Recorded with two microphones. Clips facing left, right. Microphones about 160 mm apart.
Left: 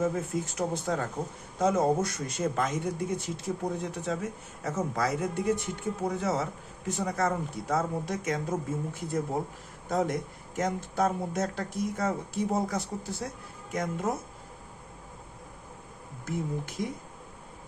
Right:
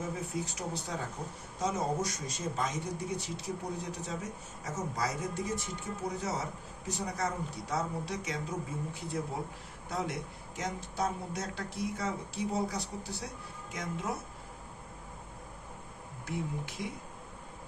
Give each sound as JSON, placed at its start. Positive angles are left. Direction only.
{"t": 0.0, "sound": "speech", "side_deg": 50}
{"t": 16.2, "sound": "speech", "side_deg": 45}